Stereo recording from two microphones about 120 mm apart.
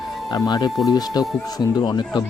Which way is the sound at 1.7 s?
35° left (ahead or behind).